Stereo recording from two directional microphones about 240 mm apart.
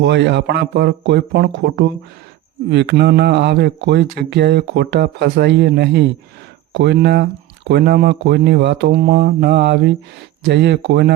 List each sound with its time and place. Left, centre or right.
0.0 s speech: right